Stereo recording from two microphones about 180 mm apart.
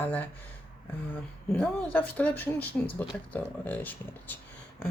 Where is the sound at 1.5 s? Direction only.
5° left (ahead or behind).